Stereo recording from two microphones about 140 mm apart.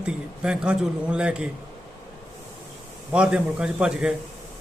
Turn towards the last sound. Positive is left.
turn(degrees=-5)  # may be behind; listen again after turning